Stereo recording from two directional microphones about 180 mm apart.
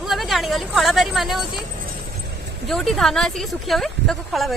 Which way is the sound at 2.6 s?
Centre (ahead or behind).